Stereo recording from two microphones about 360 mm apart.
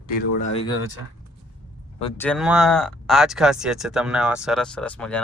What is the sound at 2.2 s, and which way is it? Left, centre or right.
Speech, centre.